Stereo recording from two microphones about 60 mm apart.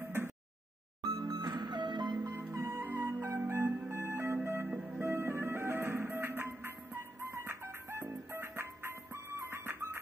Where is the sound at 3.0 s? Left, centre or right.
Right.